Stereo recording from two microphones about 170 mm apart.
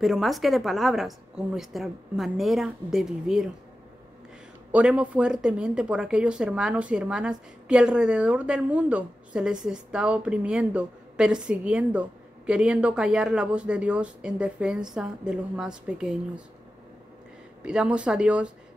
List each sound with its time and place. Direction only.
0.0 s speech: centre (ahead or behind)
4.7 s speech: 5° right (ahead or behind)
17.6 s speech: 5° right (ahead or behind)